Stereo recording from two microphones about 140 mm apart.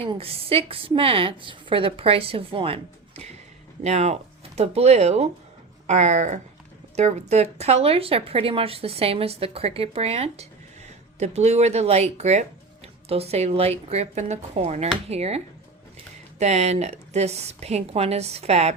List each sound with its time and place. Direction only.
0.0 s a woman's voice: 40° right (ahead or behind)
16.4 s speech: 50° right (ahead or behind)